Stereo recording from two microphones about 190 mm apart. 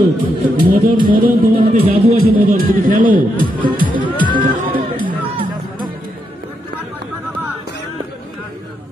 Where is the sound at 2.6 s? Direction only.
45° right (ahead or behind).